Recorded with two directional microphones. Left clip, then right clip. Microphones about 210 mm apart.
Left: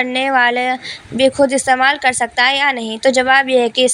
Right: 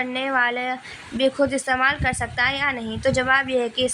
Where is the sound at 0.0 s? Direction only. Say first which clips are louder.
Left 8 dB; 30° left (ahead or behind).